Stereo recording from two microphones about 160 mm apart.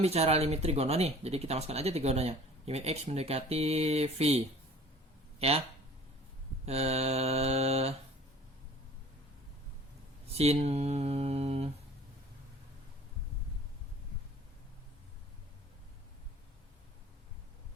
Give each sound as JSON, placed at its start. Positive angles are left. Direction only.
{"t": 0.0, "sound": "speech", "side_deg": -40}
{"t": 6.7, "sound": "speech", "side_deg": -40}
{"t": 10.3, "sound": "mantra", "side_deg": -40}